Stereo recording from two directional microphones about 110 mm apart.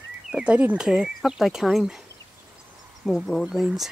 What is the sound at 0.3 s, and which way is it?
Speech, 10° right (ahead or behind).